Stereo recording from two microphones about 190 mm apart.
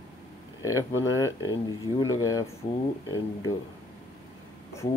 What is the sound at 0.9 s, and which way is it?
Speech, 90° left.